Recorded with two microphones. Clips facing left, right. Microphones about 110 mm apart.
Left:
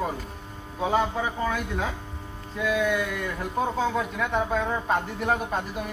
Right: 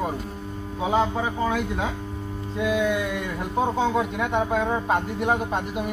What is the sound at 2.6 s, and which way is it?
Speech, 25° right (ahead or behind).